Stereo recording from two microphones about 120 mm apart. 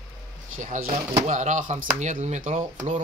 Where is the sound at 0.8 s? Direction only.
75° right (ahead or behind); by 1.8 s 90° right.